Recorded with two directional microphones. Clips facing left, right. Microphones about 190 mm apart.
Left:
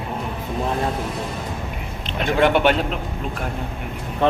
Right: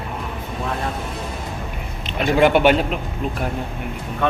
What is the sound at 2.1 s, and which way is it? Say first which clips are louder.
Speech: right 2 dB; 5° right (ahead or behind).